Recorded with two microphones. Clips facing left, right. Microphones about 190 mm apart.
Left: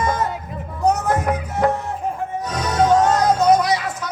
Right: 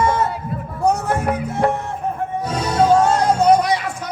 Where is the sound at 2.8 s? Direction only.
10° right (ahead or behind).